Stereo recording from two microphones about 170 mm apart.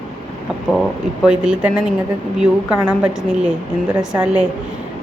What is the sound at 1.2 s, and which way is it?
A woman's voice, 5° right (ahead or behind).